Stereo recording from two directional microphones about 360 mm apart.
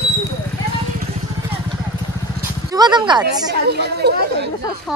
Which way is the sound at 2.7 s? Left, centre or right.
Centre.